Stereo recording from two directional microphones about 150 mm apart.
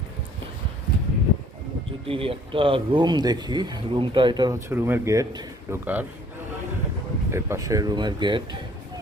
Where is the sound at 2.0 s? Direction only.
40° right (ahead or behind).